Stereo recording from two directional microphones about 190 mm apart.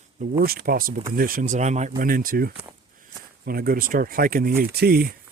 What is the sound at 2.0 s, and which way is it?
Speech, 50° right (ahead or behind).